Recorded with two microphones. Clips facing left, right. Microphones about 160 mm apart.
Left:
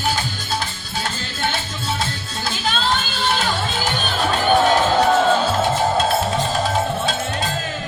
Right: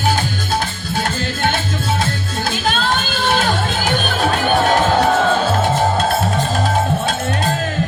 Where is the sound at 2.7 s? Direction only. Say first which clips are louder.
Right 1 dB; 50° right (ahead or behind).